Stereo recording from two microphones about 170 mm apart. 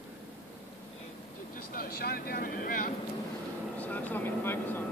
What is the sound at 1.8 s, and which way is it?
Speech, 65° left (ahead or behind).